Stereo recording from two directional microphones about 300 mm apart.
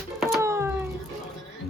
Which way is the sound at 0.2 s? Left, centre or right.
Centre.